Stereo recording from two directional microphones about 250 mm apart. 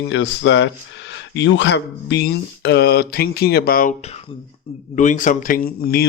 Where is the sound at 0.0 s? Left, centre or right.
Left.